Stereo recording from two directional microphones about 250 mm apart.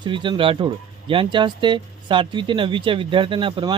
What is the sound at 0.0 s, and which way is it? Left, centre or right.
Speech, centre.